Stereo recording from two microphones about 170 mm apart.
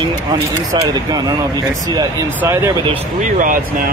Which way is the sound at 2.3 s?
15° right (ahead or behind).